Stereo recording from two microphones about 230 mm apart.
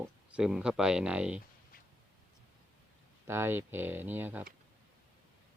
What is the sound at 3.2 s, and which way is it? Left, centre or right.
Speech, centre.